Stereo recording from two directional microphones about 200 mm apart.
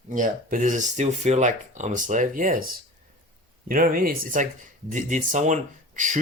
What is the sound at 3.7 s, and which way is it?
Speech, 45° right (ahead or behind).